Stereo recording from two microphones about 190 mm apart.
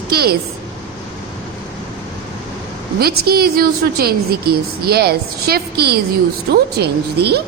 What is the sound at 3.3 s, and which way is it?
A woman's voice, 55° right (ahead or behind).